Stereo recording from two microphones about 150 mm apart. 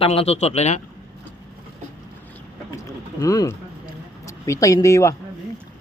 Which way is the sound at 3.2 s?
25° left (ahead or behind).